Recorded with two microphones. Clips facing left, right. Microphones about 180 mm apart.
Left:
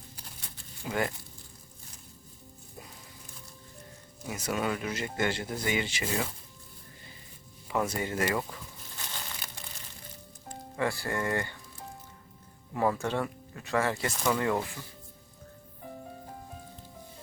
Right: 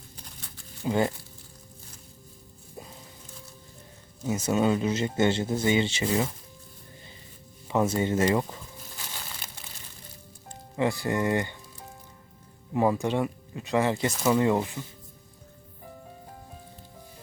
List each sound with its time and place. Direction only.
0.9 s speech: 25° right (ahead or behind)
4.3 s speech: 25° right (ahead or behind)
7.7 s speech: 25° right (ahead or behind)
10.8 s speech: 20° right (ahead or behind)
12.7 s speech: 20° right (ahead or behind)